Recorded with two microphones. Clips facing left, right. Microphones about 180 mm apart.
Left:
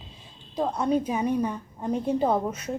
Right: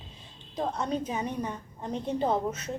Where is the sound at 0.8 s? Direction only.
10° left (ahead or behind).